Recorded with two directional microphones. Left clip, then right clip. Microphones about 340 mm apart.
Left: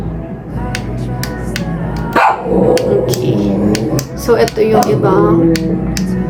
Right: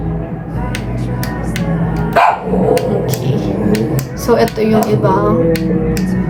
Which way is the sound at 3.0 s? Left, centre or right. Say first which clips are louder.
Left 4 dB; centre.